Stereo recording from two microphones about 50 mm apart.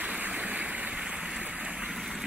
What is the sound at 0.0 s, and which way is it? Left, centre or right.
Stream, right.